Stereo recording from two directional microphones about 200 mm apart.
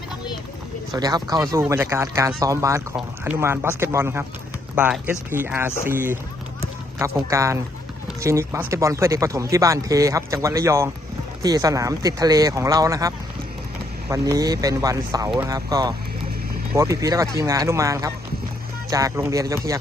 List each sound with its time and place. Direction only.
0.9 s speech: 20° right (ahead or behind)